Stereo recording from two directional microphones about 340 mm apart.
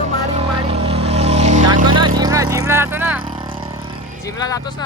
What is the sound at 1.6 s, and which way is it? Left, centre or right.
Vehicle, right.